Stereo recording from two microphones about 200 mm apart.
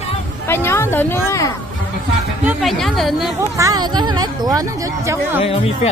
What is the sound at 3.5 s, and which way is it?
Speech, 20° right (ahead or behind).